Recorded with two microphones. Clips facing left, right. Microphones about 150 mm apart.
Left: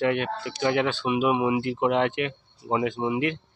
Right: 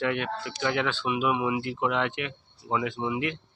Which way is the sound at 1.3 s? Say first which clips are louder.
Left 4 dB; 30° left (ahead or behind).